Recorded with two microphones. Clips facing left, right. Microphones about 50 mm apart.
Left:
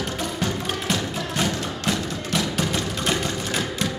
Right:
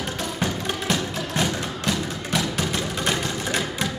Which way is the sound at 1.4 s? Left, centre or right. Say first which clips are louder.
Left 1 dB; centre.